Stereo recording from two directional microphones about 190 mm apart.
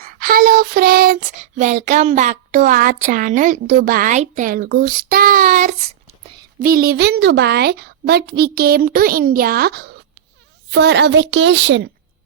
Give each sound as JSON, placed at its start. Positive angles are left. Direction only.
{"t": 0.0, "sound": "child singing", "side_deg": -50}
{"t": 6.6, "sound": "a woman's voice", "side_deg": -50}